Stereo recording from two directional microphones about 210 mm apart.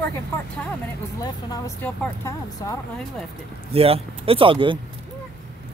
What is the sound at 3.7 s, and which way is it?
Speech, 25° right (ahead or behind).